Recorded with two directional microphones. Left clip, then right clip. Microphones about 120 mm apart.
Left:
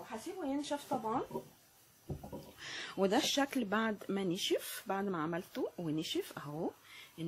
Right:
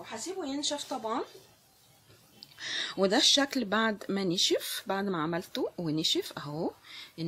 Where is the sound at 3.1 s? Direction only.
35° right (ahead or behind).